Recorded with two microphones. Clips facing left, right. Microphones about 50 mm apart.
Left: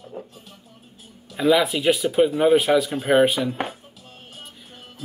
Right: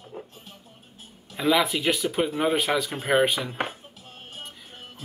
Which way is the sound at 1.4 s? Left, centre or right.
Centre.